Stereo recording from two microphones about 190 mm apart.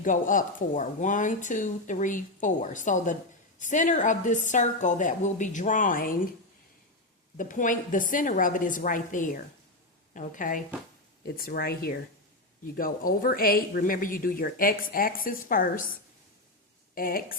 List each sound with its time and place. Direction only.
0.0 s speech: 45° left (ahead or behind)
7.3 s speech: 45° left (ahead or behind)
16.9 s speech: 50° left (ahead or behind)